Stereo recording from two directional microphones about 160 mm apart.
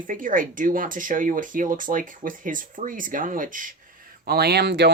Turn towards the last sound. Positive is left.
turn(degrees=-90)